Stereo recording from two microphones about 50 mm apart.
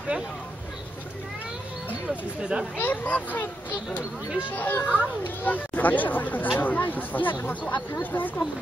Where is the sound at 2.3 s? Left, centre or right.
Centre.